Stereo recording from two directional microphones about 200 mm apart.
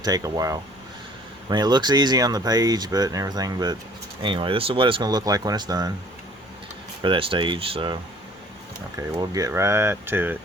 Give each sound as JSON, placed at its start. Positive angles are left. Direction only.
{"t": 0.0, "sound": "speech", "side_deg": -20}
{"t": 7.0, "sound": "speech", "side_deg": -25}
{"t": 9.0, "sound": "speech", "side_deg": -15}